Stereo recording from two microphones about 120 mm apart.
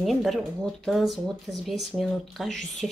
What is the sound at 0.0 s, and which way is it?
Speech, centre (ahead or behind).